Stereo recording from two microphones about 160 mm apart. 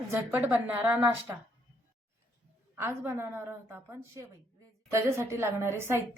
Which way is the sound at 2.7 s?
15° right (ahead or behind).